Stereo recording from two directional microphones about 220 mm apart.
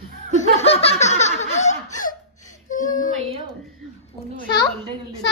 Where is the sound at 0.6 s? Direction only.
25° left (ahead or behind).